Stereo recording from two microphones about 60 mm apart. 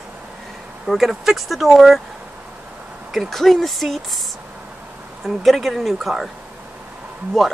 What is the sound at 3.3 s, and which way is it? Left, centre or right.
Speech, centre.